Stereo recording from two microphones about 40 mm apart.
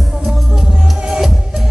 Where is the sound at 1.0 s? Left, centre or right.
Centre.